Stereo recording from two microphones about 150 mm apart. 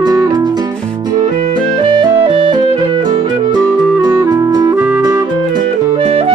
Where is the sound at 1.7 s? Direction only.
30° right (ahead or behind).